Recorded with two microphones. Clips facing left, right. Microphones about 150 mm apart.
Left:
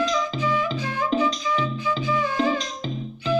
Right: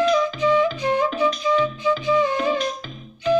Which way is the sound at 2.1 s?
20° right (ahead or behind).